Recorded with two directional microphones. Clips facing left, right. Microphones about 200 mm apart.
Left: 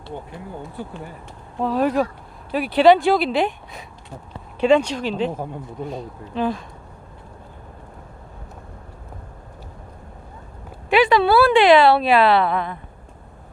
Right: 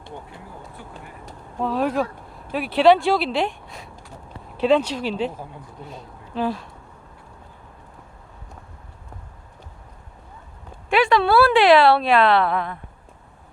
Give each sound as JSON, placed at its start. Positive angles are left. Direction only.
{"t": 1.6, "sound": "a woman's voice", "side_deg": 0}
{"t": 5.3, "sound": "speech", "side_deg": 50}
{"t": 6.3, "sound": "a woman's voice", "side_deg": -5}
{"t": 10.8, "sound": "a woman's voice", "side_deg": 0}